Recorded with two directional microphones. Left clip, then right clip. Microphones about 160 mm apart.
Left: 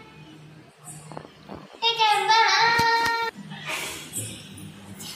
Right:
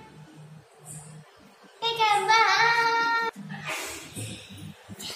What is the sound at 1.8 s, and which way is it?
Speech, 15° right (ahead or behind).